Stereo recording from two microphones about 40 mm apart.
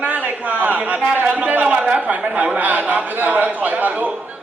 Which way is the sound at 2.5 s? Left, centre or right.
Right.